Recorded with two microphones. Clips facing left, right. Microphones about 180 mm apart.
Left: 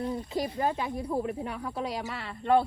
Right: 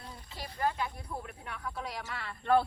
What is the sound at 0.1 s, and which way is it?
Speech, 20° left (ahead or behind).